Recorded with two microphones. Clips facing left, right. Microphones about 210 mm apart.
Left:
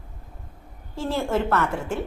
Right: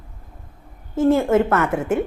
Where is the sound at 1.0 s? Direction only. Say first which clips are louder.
Right 9 dB; 55° right (ahead or behind).